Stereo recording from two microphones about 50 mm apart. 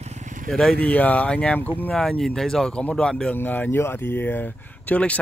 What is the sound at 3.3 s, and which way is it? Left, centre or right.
Speech, left.